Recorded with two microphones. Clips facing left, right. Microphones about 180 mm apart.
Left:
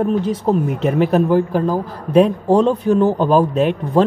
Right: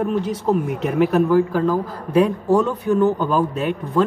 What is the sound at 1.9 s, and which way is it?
Speech, 75° left (ahead or behind).